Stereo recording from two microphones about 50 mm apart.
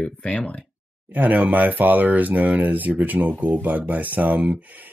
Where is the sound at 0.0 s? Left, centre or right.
Centre.